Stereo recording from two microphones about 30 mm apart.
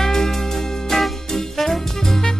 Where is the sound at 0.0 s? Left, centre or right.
Centre.